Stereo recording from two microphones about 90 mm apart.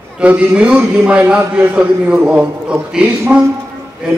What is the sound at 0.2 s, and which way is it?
A man's voice, 15° right (ahead or behind).